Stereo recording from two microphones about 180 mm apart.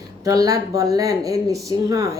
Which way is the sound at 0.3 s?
20° right (ahead or behind).